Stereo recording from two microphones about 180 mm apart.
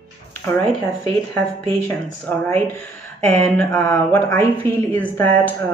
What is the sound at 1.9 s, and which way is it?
Speech, 10° left (ahead or behind).